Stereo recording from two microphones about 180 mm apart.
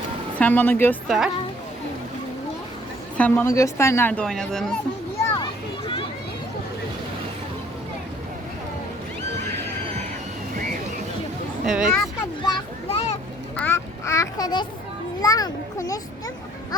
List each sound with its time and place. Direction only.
0.3 s a woman's voice: 10° left (ahead or behind)
3.2 s a woman's voice: 10° left (ahead or behind)
5.4 s a sound: 25° left (ahead or behind)
11.6 s speech: centre (ahead or behind)
12.4 s children playing: 30° left (ahead or behind)
13.6 s a sound: 15° left (ahead or behind)
15.2 s a child's voice: 20° left (ahead or behind)